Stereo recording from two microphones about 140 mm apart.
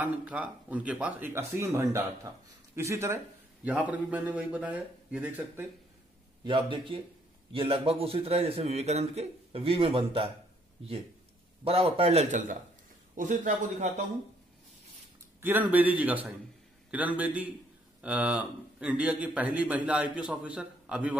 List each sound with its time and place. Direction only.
0.0 s a man's voice: 10° right (ahead or behind)
6.4 s a man's voice: 35° right (ahead or behind)
11.6 s a man's voice: 45° right (ahead or behind); by 14.0 s 60° right (ahead or behind)
15.4 s a man's voice: 10° right (ahead or behind)